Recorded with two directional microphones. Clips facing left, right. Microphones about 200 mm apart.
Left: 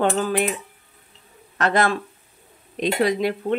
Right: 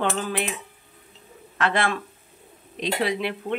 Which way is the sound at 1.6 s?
40° left (ahead or behind).